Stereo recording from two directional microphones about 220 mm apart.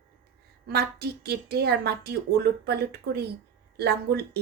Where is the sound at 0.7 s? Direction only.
45° right (ahead or behind).